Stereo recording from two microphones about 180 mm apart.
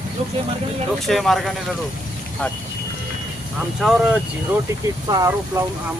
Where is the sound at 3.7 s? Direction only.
5° right (ahead or behind); by 5.6 s 20° right (ahead or behind).